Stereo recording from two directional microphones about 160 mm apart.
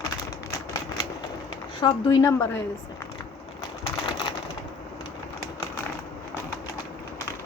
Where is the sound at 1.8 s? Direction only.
25° left (ahead or behind).